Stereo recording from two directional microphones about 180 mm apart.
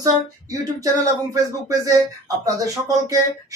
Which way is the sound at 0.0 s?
20° right (ahead or behind).